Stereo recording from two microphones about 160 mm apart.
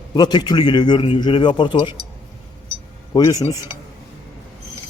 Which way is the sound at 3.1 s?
20° left (ahead or behind).